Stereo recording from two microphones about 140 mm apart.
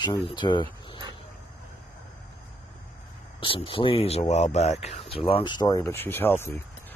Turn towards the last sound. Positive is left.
turn(degrees=15)  # may be behind; listen again after turning